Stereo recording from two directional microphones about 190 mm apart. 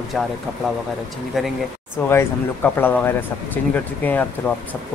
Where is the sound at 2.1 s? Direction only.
10° left (ahead or behind).